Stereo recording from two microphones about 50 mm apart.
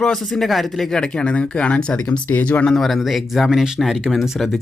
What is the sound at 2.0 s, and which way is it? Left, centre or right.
Speech, left.